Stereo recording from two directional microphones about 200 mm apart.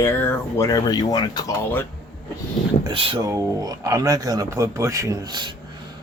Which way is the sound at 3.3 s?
15° right (ahead or behind).